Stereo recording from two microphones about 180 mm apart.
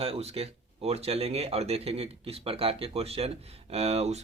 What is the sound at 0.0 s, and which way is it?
Speech, 35° right (ahead or behind).